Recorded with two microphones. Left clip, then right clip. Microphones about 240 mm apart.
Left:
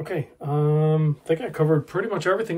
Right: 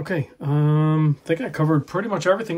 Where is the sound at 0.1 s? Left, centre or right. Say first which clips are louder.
Right 2 dB; right.